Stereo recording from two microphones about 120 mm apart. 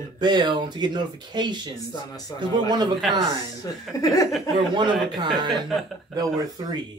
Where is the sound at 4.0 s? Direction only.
30° left (ahead or behind).